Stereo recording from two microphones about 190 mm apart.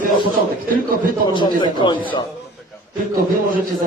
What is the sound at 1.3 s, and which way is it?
Speech, 25° left (ahead or behind).